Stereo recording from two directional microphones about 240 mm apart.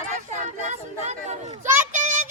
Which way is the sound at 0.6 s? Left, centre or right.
Right.